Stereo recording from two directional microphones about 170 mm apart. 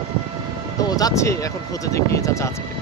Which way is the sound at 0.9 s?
20° left (ahead or behind).